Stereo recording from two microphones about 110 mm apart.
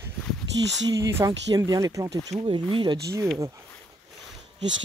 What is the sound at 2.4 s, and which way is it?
Speech, 50° right (ahead or behind).